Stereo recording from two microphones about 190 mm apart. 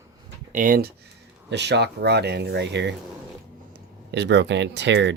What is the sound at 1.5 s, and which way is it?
Speech, 65° right (ahead or behind).